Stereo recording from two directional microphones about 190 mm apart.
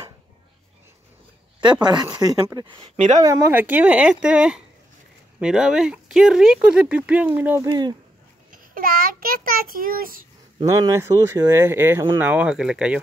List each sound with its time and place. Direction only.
1.6 s speech: 25° right (ahead or behind)
8.5 s a child's voice: 50° right (ahead or behind)
10.6 s speech: 15° right (ahead or behind)